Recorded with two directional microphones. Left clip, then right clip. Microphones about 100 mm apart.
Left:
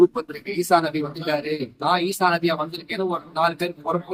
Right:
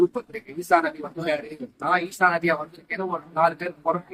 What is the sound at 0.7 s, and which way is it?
Speech, 40° left (ahead or behind).